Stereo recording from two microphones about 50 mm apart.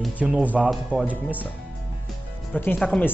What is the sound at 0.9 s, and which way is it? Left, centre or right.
Speech, right.